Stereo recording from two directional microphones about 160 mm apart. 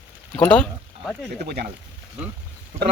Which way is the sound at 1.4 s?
75° right (ahead or behind).